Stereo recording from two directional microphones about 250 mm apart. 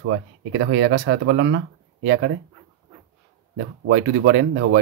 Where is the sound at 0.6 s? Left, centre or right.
Right.